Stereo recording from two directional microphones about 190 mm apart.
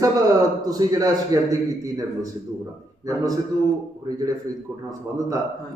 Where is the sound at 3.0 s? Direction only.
20° right (ahead or behind).